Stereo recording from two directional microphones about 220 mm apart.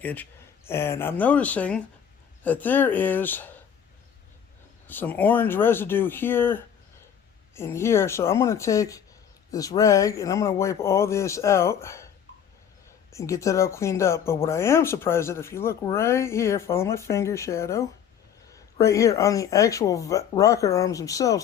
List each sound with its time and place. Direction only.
0.0 s speech: 10° left (ahead or behind)
4.9 s speech: 10° left (ahead or behind)